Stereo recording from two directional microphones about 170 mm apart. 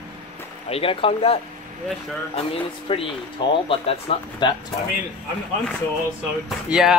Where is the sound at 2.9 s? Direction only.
30° left (ahead or behind).